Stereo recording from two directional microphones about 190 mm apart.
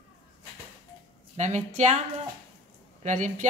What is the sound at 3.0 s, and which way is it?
Speech, 40° right (ahead or behind).